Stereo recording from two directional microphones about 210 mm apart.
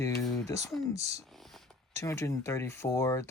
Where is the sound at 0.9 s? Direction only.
30° right (ahead or behind).